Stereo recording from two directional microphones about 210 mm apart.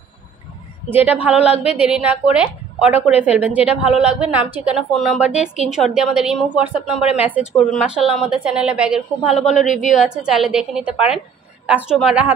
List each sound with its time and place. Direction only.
1.2 s speech: 5° right (ahead or behind)
1.5 s a woman's voice: 30° left (ahead or behind)
1.8 s a woman's voice: 5° right (ahead or behind)
9.4 s a woman's voice: 35° left (ahead or behind)
9.9 s a woman's voice: 5° right (ahead or behind)